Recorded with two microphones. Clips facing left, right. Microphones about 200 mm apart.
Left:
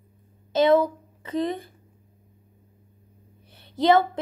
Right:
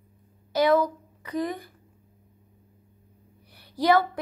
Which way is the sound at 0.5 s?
25° left (ahead or behind).